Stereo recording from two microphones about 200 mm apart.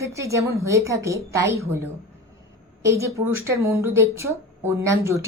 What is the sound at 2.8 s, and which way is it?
Speech, 15° right (ahead or behind).